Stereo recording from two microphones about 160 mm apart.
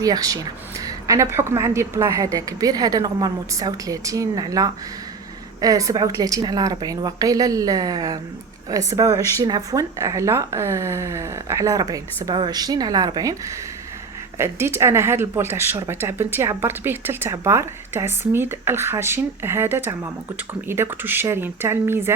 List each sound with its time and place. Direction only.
0.0 s speech: 20° right (ahead or behind)
14.3 s speech: 15° right (ahead or behind)